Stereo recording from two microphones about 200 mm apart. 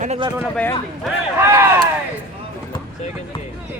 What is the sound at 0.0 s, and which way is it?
Speech, 35° right (ahead or behind).